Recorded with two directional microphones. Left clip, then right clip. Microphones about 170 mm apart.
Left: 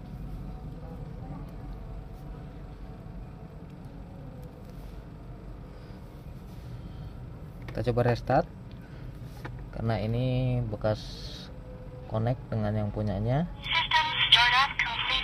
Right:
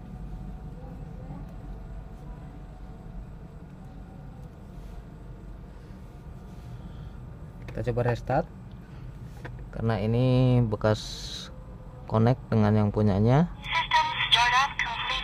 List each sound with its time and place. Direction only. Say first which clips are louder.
7.7 s speech: left 1 dB; centre (ahead or behind)
9.4 s a man's voice: right 3 dB; 15° right (ahead or behind); by 13.5 s 35° right (ahead or behind)
13.7 s telephone: right 1 dB; 5° right (ahead or behind)